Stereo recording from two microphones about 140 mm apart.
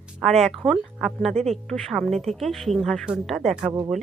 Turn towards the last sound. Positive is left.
turn(degrees=-15)  # may be behind; listen again after turning